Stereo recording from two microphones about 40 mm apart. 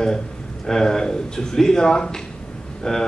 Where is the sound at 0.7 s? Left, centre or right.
Centre.